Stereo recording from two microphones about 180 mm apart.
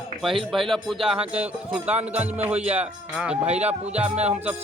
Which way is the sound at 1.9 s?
35° right (ahead or behind).